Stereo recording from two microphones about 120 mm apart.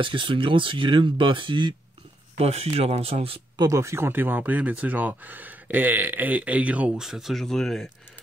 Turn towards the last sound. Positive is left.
turn(degrees=5)  # may be behind; listen again after turning